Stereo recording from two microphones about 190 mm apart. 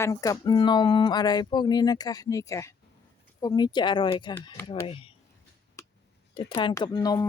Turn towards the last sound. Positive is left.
turn(degrees=20)  # may be behind; listen again after turning